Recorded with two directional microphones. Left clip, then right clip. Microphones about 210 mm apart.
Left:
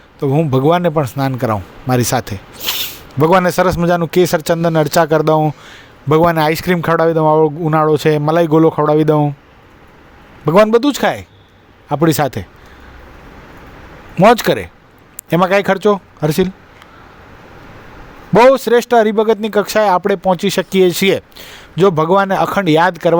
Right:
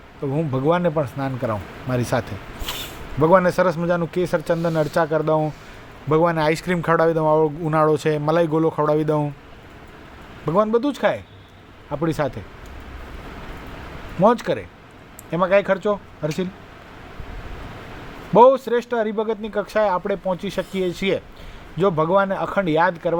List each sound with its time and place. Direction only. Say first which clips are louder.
0.2 s a man's voice: left 9 dB; 45° left (ahead or behind)
10.4 s a man's voice: left 9 dB; 50° left (ahead or behind)
14.2 s a man's voice: left 8 dB; 50° left (ahead or behind)
18.3 s a man's voice: left 5 dB; 50° left (ahead or behind)